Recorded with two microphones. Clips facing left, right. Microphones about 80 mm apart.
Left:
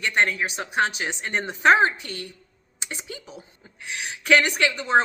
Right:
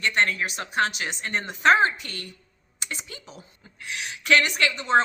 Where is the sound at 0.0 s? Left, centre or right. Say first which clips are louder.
Left 1 dB; centre.